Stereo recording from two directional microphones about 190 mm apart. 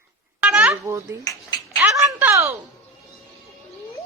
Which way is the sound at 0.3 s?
5° right (ahead or behind).